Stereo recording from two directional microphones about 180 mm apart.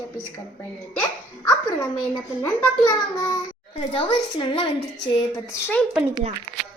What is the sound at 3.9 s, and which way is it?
Speech, 30° left (ahead or behind).